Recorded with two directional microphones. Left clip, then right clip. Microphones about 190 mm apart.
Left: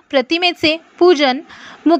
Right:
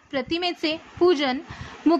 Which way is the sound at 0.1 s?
40° left (ahead or behind).